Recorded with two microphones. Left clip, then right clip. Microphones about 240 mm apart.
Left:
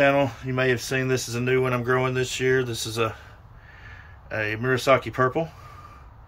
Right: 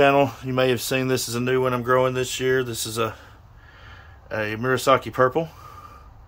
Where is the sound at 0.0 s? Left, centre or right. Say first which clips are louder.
Right 3 dB; right.